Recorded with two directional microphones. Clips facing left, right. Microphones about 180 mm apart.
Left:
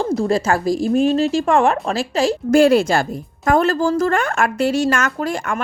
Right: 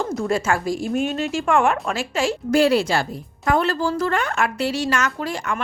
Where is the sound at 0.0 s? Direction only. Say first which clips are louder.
Left 4 dB; 35° left (ahead or behind).